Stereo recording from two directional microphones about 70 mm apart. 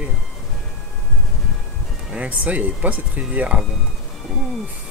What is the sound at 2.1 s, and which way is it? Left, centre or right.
Speech, right.